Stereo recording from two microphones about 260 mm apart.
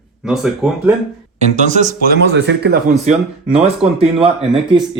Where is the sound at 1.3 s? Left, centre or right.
Right.